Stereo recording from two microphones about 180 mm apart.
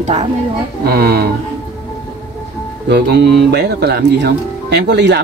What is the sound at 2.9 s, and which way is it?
Speech, 65° right (ahead or behind).